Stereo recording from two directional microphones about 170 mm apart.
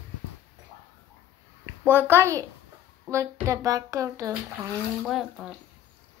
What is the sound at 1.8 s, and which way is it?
A child's voice, 15° right (ahead or behind).